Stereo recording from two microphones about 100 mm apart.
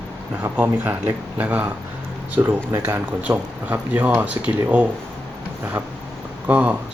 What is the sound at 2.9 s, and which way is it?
Speech, 15° right (ahead or behind).